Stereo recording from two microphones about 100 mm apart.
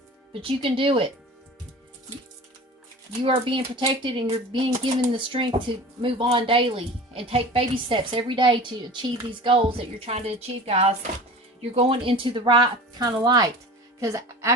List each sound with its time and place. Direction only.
0.4 s speech: 65° right (ahead or behind)
3.1 s speech: 60° right (ahead or behind); by 10.9 s 90° right
11.7 s a woman's voice: 65° right (ahead or behind); by 14.5 s 35° right (ahead or behind)